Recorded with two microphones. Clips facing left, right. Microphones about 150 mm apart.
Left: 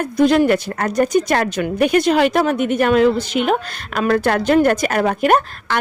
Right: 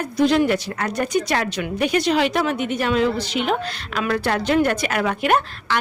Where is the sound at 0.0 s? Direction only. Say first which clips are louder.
Left 4 dB; 50° left (ahead or behind).